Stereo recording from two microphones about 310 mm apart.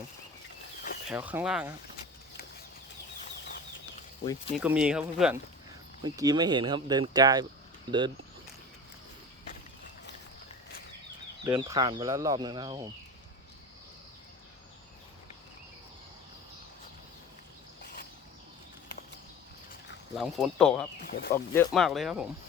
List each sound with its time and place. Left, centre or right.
1.0 s speech: centre
4.5 s speech: centre
11.4 s speech: centre
20.1 s speech: centre
21.1 s speech: left
21.3 s speech: centre